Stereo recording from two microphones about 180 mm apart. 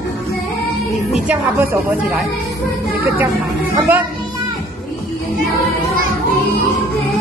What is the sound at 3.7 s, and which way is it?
Speech, 10° right (ahead or behind).